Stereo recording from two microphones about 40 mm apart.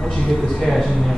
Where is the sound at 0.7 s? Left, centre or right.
Centre.